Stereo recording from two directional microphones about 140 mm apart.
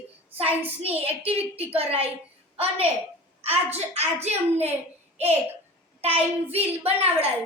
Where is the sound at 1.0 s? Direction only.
45° right (ahead or behind).